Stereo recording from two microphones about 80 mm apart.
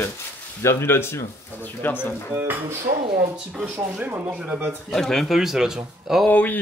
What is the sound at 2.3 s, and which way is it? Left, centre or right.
Speech, right.